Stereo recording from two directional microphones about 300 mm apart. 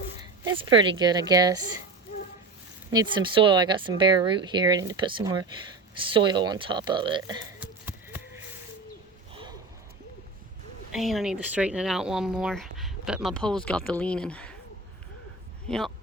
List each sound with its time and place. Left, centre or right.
0.2 s a woman's voice: centre
2.9 s speech: centre
9.3 s a sound: centre
10.9 s speech: centre